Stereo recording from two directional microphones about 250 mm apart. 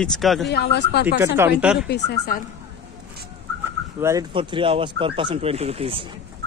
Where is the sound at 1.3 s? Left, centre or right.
Centre.